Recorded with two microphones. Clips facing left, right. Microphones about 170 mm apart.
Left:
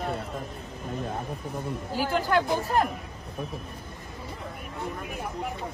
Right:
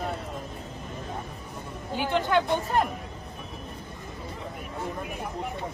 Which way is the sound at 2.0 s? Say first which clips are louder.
Right 1 dB; centre (ahead or behind).